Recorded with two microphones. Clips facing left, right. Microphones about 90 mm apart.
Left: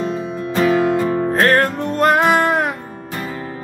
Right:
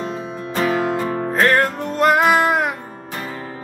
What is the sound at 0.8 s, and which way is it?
Music, 30° right (ahead or behind).